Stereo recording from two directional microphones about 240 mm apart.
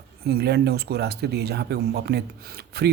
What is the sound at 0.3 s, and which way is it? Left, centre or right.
Speech, right.